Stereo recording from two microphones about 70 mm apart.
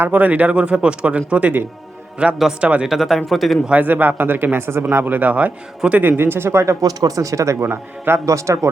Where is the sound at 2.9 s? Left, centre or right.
Centre.